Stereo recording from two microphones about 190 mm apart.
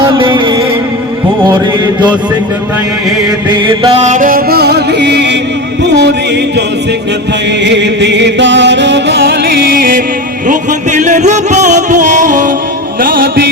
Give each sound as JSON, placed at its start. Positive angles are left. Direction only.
{"t": 0.0, "sound": "music", "side_deg": -25}
{"t": 3.5, "sound": "music", "side_deg": -25}
{"t": 4.0, "sound": "music", "side_deg": -40}
{"t": 7.6, "sound": "music", "side_deg": -65}
{"t": 10.5, "sound": "music", "side_deg": -40}